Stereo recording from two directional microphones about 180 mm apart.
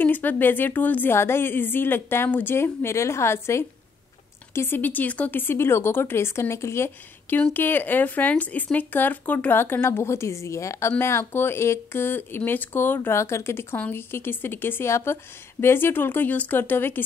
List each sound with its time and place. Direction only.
0.0 s speech: 10° left (ahead or behind)